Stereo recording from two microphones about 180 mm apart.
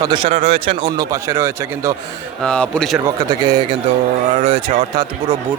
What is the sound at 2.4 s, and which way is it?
Speech, 5° left (ahead or behind).